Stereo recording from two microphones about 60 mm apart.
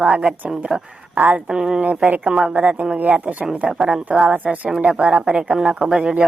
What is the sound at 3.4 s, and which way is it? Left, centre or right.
A woman's voice, centre.